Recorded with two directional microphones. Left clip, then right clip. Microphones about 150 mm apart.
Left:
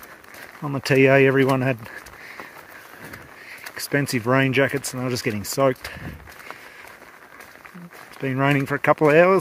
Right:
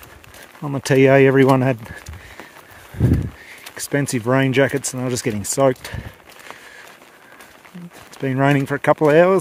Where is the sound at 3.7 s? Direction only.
25° right (ahead or behind).